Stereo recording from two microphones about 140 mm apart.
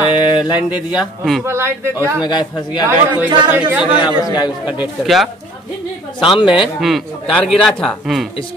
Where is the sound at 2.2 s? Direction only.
35° left (ahead or behind).